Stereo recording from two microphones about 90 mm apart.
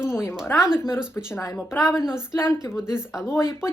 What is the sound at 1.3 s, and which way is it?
Speech, 35° left (ahead or behind).